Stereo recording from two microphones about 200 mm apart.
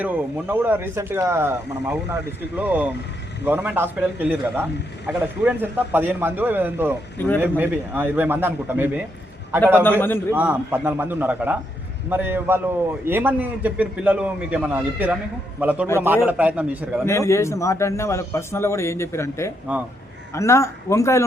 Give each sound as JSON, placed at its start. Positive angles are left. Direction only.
{"t": 0.0, "sound": "a man's voice", "side_deg": -10}
{"t": 7.2, "sound": "a man's voice", "side_deg": 10}
{"t": 7.4, "sound": "a man's voice", "side_deg": -10}
{"t": 10.3, "sound": "a man's voice", "side_deg": -10}
{"t": 17.1, "sound": "a man's voice", "side_deg": 15}
{"t": 19.7, "sound": "a man's voice", "side_deg": -10}
{"t": 20.3, "sound": "a man's voice", "side_deg": 15}